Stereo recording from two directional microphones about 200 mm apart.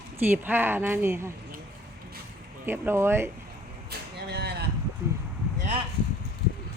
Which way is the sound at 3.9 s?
55° right (ahead or behind).